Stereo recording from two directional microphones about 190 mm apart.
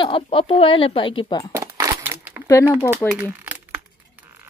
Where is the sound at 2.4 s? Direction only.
15° left (ahead or behind).